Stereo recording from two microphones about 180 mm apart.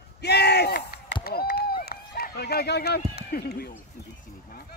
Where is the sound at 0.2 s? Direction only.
65° left (ahead or behind).